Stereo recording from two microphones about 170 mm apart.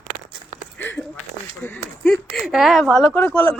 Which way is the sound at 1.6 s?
10° left (ahead or behind).